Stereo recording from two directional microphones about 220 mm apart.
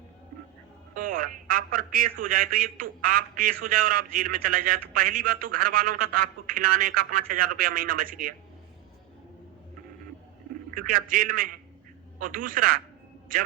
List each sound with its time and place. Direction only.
0.9 s a man's voice: 40° right (ahead or behind)
10.8 s a man's voice: 40° right (ahead or behind)